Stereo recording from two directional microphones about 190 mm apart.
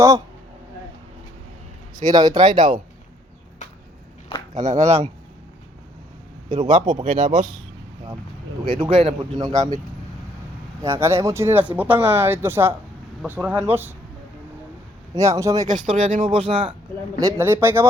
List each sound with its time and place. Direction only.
2.0 s speech: 20° right (ahead or behind)
4.5 s speech: 40° right (ahead or behind)
6.5 s speech: 40° right (ahead or behind)
8.8 s speech: 25° right (ahead or behind)
10.8 s a woman's voice: 15° right (ahead or behind)
15.1 s a woman's voice: 15° right (ahead or behind)
15.6 s speech: 40° right (ahead or behind)
16.3 s speech: 30° right (ahead or behind)
17.2 s a woman's voice: 15° right (ahead or behind)